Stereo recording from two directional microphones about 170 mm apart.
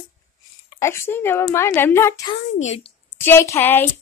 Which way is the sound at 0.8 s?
15° left (ahead or behind).